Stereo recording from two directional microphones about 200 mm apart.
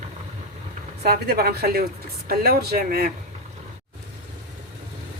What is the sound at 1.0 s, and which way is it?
Speech, 50° right (ahead or behind).